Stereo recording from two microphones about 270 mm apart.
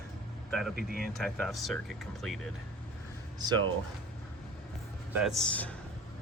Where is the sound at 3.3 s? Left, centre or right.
Centre.